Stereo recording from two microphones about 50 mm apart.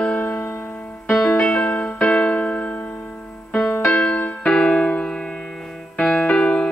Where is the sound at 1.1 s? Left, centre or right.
Centre.